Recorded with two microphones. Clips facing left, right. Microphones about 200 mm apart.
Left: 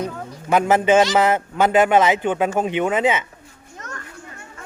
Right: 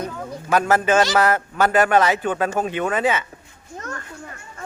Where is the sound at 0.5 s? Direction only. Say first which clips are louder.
Left 2 dB; 20° left (ahead or behind).